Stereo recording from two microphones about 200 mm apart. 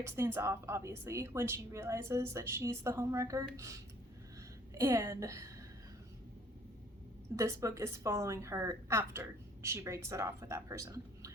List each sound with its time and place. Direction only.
0.0 s speech: 10° right (ahead or behind)
7.3 s speech: 15° right (ahead or behind)